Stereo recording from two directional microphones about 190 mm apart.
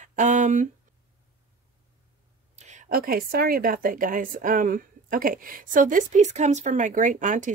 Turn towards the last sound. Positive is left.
turn(degrees=-40)  # may be behind; listen again after turning